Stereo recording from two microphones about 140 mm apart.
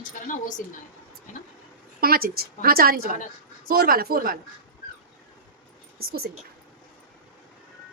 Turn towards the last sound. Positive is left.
turn(degrees=-90)